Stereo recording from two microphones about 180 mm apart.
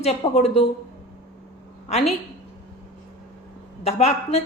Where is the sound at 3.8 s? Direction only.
35° left (ahead or behind).